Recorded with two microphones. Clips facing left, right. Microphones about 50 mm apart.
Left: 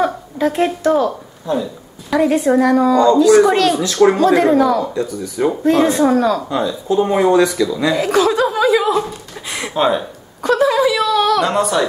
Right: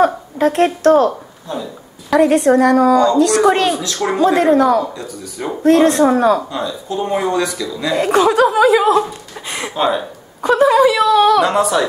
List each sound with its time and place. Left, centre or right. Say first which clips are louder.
0.5 s a woman's voice: right 4 dB; centre
3.4 s speech: right 1 dB; centre
3.7 s speech: left 6 dB; centre
4.2 s speech: left 1 dB; centre
5.0 s speech: left 7 dB; centre
6.1 s speech: right 2 dB; right
6.5 s speech: left 5 dB; centre
8.3 s speech: right 3 dB; centre
10.4 s speech: right 3 dB; centre